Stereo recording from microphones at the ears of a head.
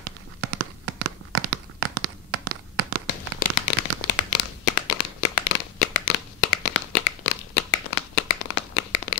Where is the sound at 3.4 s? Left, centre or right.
Left.